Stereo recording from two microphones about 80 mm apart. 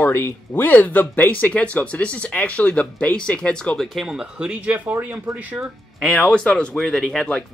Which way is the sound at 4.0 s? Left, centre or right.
Centre.